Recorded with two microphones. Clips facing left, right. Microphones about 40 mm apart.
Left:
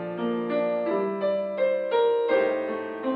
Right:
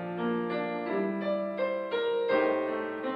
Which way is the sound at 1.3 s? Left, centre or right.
Centre.